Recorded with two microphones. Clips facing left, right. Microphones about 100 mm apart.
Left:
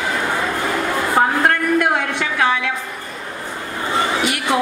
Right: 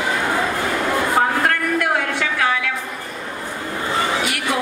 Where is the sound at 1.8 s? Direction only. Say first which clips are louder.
Left 2 dB; 25° left (ahead or behind).